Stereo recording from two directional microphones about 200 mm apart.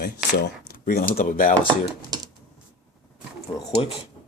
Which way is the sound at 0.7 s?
45° left (ahead or behind).